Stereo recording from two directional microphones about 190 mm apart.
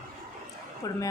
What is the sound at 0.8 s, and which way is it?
Speech, 20° left (ahead or behind).